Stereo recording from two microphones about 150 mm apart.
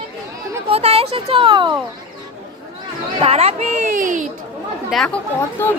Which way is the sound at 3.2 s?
40° right (ahead or behind).